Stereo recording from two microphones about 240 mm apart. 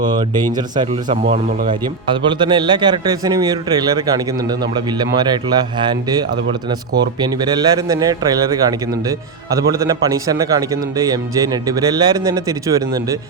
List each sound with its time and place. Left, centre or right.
0.0 s a man's voice: centre
1.3 s speech: right
1.8 s a man's voice: centre